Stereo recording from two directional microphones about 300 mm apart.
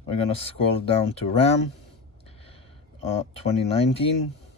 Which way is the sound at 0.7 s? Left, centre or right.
Centre.